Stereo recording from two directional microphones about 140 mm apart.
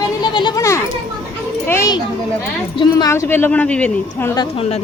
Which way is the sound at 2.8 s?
30° left (ahead or behind).